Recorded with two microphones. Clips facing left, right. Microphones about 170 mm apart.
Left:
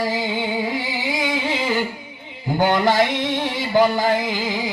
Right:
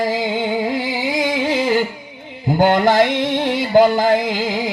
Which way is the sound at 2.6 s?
50° right (ahead or behind).